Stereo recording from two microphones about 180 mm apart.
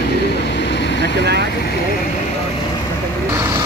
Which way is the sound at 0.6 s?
75° left (ahead or behind).